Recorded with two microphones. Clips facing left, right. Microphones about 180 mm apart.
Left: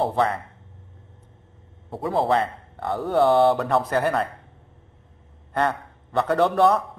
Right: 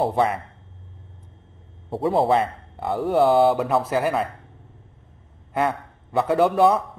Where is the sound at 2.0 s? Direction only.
25° right (ahead or behind).